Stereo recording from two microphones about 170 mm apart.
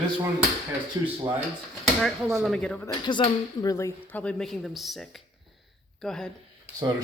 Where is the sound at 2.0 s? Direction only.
Centre (ahead or behind).